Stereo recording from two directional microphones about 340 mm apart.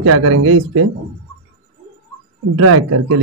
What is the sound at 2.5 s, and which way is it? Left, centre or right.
Speech, right.